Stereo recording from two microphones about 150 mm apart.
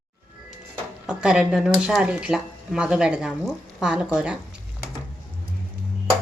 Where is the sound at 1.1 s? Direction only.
5° right (ahead or behind).